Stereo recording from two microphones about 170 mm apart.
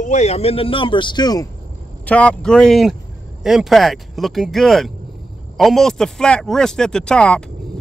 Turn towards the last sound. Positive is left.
turn(degrees=5)  # may be behind; listen again after turning